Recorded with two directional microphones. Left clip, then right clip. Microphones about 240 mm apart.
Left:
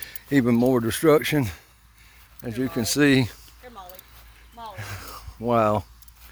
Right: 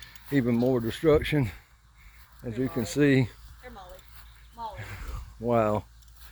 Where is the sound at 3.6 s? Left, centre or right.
Left.